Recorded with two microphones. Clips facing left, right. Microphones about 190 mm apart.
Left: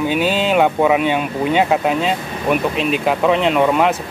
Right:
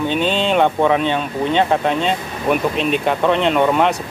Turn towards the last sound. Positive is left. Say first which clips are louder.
# left 1 dB
turn(degrees=0)  # may be behind; listen again after turning